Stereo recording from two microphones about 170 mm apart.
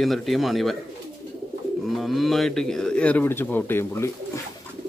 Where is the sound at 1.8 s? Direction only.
Centre (ahead or behind).